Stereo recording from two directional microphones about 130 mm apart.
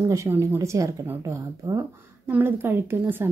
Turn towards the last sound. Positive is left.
turn(degrees=-15)  # may be behind; listen again after turning